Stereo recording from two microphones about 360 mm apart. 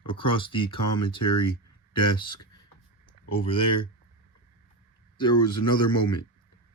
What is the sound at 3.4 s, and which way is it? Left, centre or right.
Speech, centre.